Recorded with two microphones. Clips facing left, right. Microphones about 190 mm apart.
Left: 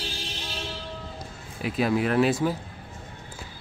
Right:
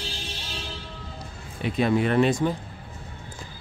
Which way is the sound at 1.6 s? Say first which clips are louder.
Right 2 dB; 5° left (ahead or behind).